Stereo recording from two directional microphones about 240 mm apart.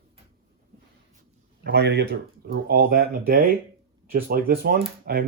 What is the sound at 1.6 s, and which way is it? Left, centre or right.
Speech, right.